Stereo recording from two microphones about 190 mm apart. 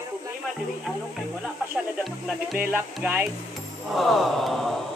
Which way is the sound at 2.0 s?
Centre (ahead or behind).